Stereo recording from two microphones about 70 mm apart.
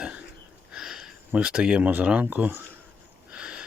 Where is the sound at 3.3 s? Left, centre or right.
Centre.